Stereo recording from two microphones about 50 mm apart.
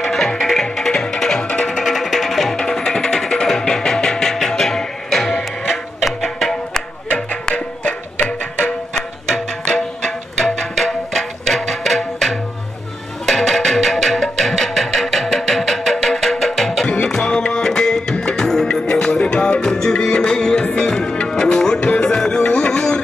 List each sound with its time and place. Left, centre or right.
0.0 s music: centre
8.2 s music: left
10.0 s music: centre